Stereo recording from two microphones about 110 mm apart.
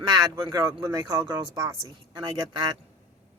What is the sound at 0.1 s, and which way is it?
Speech, 35° right (ahead or behind).